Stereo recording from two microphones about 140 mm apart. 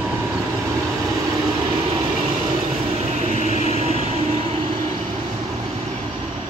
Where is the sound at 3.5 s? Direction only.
55° left (ahead or behind).